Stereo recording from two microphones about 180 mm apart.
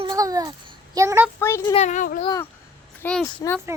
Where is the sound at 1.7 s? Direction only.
40° left (ahead or behind).